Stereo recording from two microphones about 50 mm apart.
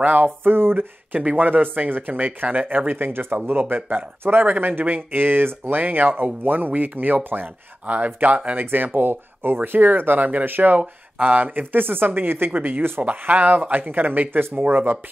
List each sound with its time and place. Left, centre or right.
0.0 s speech: right
1.1 s speech: right
8.6 s speech: right
10.8 s speech: right
13.0 s speech: right